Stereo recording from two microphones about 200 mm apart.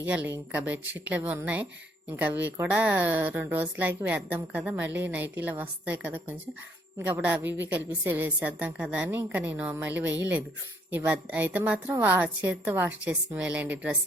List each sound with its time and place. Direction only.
0.0 s a woman's voice: 10° right (ahead or behind)